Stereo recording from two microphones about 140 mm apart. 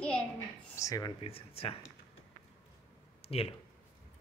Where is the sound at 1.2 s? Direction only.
45° left (ahead or behind).